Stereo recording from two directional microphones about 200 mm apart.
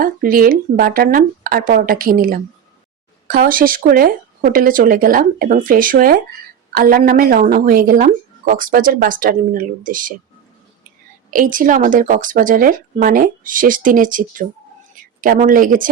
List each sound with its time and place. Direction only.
0.0 s a woman's voice: 45° right (ahead or behind)
11.3 s a woman's voice: 45° right (ahead or behind)